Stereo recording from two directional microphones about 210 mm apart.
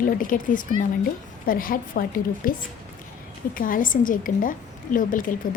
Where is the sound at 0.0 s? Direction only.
40° left (ahead or behind).